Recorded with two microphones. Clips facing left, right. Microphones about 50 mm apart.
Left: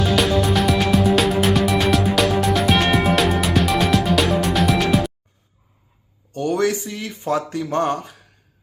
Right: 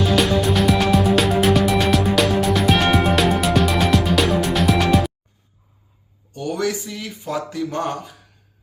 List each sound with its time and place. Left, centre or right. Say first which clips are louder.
0.0 s music: even; centre
6.3 s a sound: left 4 dB; left
7.3 s speech: left 2 dB; left